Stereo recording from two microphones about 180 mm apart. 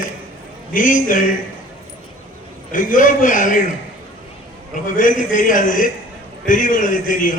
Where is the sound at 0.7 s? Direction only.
50° left (ahead or behind).